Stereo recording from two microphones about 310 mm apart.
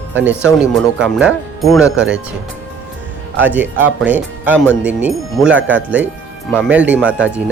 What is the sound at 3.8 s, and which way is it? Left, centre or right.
Speech, right.